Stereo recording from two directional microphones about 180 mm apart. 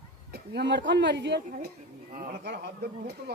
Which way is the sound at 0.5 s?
80° right.